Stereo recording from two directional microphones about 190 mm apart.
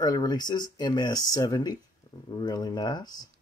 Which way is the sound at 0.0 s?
20° left (ahead or behind).